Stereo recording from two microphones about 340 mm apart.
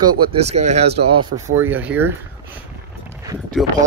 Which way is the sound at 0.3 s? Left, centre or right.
Centre.